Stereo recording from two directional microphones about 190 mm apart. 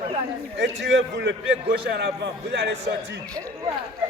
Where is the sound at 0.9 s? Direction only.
70° right (ahead or behind).